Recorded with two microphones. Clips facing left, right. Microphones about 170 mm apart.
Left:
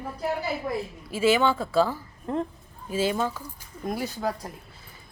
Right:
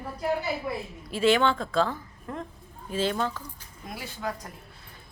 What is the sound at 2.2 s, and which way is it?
Speech, 30° left (ahead or behind).